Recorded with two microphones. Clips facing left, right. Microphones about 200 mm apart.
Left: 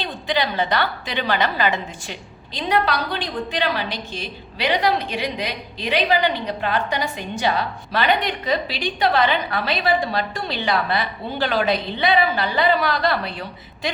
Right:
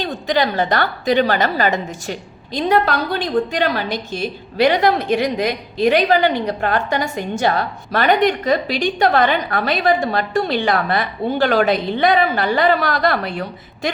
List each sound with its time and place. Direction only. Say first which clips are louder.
0.0 s a woman's voice: right 5 dB; 45° right (ahead or behind)